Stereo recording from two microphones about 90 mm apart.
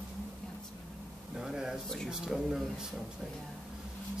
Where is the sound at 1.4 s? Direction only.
5° right (ahead or behind).